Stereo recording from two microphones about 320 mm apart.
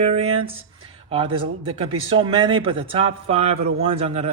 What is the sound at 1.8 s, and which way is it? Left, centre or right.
A man's voice, centre.